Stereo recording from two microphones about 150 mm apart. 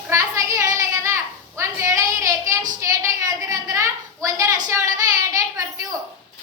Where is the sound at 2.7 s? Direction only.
20° right (ahead or behind).